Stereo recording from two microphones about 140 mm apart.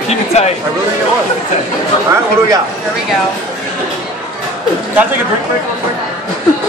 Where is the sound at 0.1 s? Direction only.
50° left (ahead or behind).